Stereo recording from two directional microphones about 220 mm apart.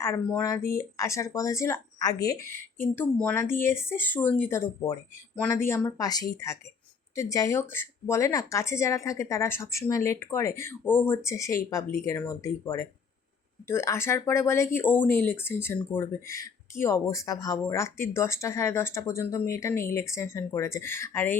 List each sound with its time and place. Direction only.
0.0 s speech: 10° left (ahead or behind)
0.6 s speech: 40° left (ahead or behind)
0.9 s speech: 15° left (ahead or behind)